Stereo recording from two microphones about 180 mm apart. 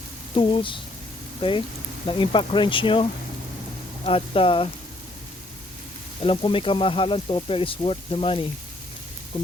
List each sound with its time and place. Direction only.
0.3 s speech: 30° left (ahead or behind)
6.2 s speech: 30° left (ahead or behind)
9.3 s music: 30° left (ahead or behind)